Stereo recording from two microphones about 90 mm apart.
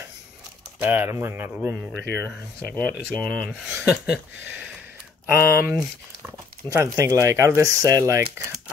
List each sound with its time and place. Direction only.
0.8 s speech: 20° right (ahead or behind)
2.0 s speech: 20° left (ahead or behind)
2.8 s speech: 10° left (ahead or behind)
3.8 s a sound: 10° right (ahead or behind)
5.3 s speech: 25° right (ahead or behind)
6.2 s a sound: 30° right (ahead or behind)
7.1 s speech: 35° right (ahead or behind)